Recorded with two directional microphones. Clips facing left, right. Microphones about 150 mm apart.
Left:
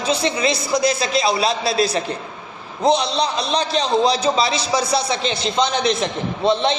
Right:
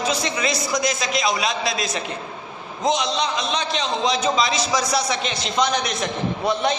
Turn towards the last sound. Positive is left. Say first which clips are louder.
# left 3 dB
turn(degrees=25)  # may be behind; listen again after turning